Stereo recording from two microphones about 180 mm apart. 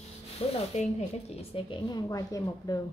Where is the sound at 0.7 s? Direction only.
40° left (ahead or behind).